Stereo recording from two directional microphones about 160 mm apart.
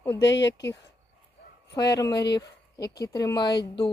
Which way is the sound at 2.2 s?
90° left.